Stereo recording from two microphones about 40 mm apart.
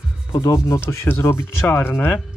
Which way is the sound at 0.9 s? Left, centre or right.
Left.